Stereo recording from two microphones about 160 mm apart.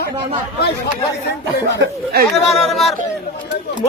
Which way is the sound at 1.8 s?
80° right.